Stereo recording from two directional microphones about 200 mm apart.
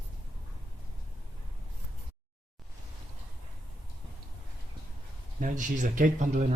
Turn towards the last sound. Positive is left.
turn(degrees=-35)  # may be behind; listen again after turning